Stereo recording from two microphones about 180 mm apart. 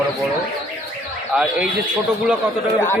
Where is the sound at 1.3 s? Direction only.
5° right (ahead or behind).